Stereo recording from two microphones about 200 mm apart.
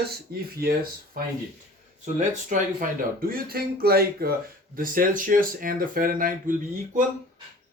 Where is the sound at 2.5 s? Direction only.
40° right (ahead or behind).